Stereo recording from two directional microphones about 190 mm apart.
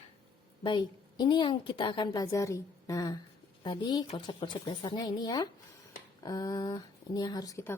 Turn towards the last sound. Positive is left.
turn(degrees=15)  # may be behind; listen again after turning